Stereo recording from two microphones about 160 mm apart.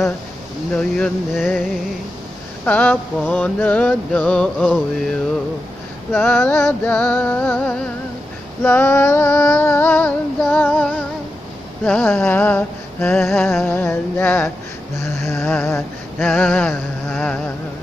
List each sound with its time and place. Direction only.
0.7 s speech: 5° left (ahead or behind)
2.6 s female singing: 10° left (ahead or behind)
6.2 s female singing: 15° left (ahead or behind)
15.0 s a sound: 15° left (ahead or behind)
16.3 s female singing: 10° left (ahead or behind)